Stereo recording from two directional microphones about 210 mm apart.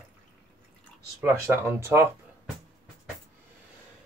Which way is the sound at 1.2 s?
10° right (ahead or behind).